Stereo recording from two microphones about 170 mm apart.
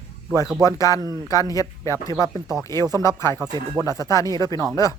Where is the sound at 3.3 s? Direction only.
20° right (ahead or behind).